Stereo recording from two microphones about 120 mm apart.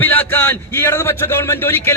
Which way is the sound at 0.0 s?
15° left (ahead or behind).